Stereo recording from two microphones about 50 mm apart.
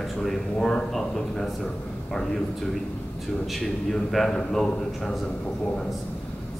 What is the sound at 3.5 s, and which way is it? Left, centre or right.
A man's voice, centre.